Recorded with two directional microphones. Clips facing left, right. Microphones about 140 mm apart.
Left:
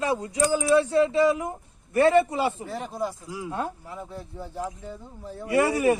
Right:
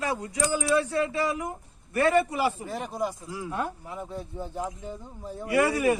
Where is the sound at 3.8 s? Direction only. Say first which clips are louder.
Right 2 dB; 15° right (ahead or behind).